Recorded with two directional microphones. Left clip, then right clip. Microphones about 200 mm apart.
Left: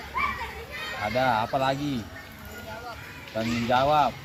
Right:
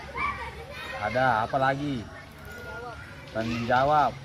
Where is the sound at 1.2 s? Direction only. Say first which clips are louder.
Even; 15° left (ahead or behind).